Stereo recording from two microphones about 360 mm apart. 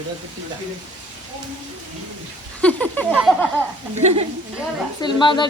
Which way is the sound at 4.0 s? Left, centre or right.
Centre.